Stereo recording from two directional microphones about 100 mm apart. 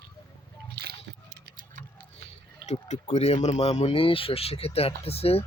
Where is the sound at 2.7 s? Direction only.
90° left.